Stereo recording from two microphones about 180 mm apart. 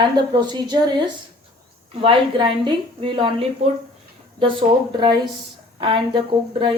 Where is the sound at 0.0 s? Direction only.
25° right (ahead or behind).